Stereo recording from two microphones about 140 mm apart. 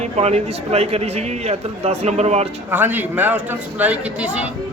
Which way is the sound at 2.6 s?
15° right (ahead or behind).